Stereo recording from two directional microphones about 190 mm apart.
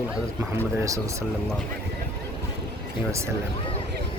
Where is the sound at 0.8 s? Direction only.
15° right (ahead or behind).